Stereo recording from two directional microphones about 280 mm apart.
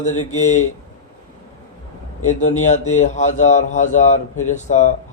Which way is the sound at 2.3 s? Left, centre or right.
Left.